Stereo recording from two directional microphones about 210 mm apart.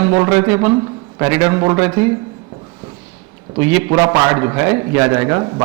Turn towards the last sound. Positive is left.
turn(degrees=-20)  # may be behind; listen again after turning